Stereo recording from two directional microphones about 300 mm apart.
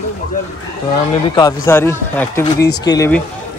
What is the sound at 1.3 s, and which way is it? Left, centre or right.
Speech, centre.